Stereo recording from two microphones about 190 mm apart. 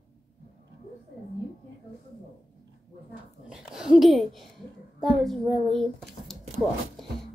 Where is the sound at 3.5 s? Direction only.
5° right (ahead or behind).